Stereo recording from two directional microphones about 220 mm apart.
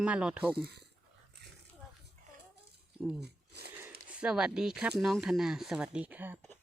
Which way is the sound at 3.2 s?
50° right (ahead or behind).